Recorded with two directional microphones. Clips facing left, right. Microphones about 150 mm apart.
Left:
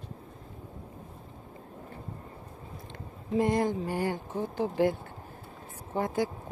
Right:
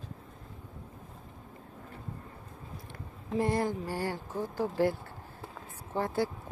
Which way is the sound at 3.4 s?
20° left (ahead or behind).